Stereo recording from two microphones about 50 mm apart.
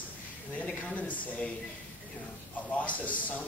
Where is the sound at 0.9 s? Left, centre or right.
Left.